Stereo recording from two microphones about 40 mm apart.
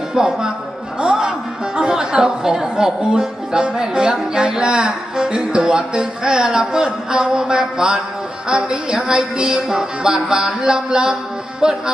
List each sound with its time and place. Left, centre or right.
0.1 s speech: centre
0.9 s music: centre
1.7 s speech: centre
11.6 s music: centre